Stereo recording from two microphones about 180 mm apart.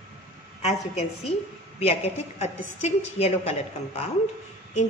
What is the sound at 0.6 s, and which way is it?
A woman's voice, 35° left (ahead or behind).